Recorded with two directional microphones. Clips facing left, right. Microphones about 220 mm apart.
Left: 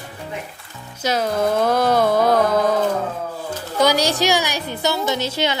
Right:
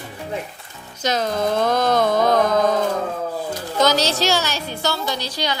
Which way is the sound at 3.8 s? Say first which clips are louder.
Left 1 dB; 10° left (ahead or behind).